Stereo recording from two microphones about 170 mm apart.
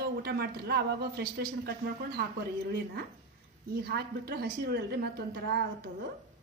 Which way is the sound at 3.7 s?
65° right (ahead or behind).